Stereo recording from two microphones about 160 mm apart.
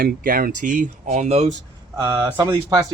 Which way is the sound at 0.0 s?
65° right (ahead or behind).